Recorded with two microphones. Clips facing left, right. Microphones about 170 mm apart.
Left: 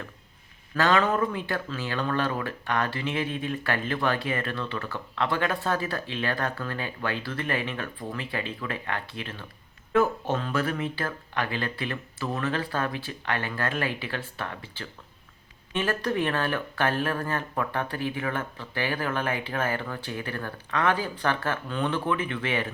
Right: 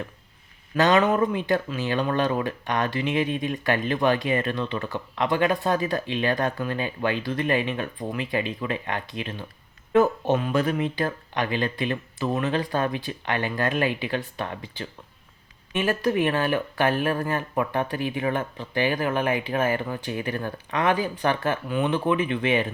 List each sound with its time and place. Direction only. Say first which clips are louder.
0.8 s speech: right 4 dB; 20° right (ahead or behind)